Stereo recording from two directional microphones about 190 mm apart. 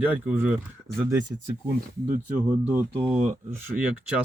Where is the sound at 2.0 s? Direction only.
40° right (ahead or behind).